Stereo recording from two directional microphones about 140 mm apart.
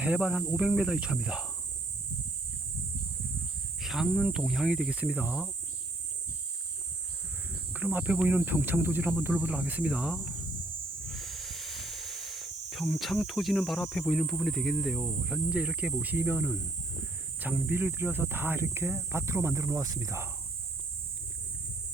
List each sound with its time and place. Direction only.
0.0 s speech: 10° right (ahead or behind)
3.8 s speech: centre (ahead or behind)
7.7 s speech: 10° right (ahead or behind)